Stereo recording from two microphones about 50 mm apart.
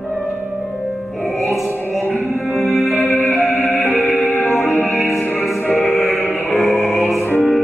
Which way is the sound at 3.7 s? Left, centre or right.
Left.